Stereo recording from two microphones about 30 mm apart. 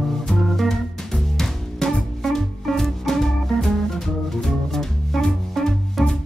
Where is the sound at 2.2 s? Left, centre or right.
Centre.